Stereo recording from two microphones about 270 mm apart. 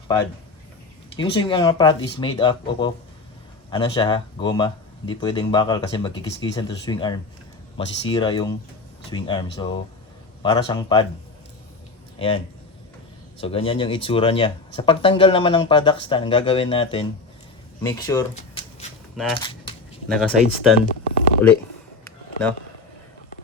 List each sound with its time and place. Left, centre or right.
1.1 s speech: centre
12.2 s speech: left
13.4 s speech: left
18.3 s a sound: left
19.3 s speech: centre
20.1 s speech: centre
20.8 s a sound: left